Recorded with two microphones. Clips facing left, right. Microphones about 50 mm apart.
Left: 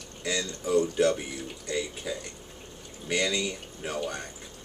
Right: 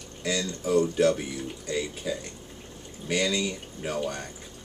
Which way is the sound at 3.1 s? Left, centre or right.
Centre.